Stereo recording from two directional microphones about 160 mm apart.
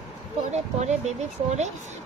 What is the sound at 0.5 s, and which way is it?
Speech, 45° right (ahead or behind).